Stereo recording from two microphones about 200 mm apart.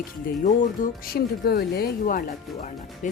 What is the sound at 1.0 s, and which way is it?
Speech, 50° left (ahead or behind).